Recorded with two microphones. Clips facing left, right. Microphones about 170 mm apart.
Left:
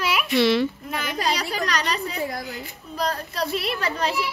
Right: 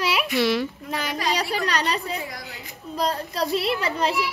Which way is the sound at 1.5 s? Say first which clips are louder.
Right 1 dB; 30° right (ahead or behind).